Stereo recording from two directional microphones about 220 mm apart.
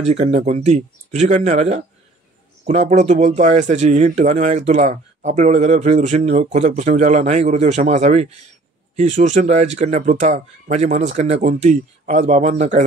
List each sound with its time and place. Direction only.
0.0 s speech: 30° right (ahead or behind)